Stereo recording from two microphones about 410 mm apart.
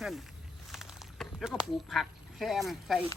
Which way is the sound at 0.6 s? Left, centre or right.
Centre.